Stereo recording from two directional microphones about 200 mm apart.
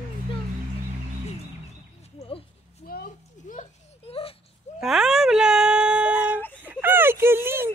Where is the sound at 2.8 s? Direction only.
50° left (ahead or behind); by 4.4 s 30° left (ahead or behind).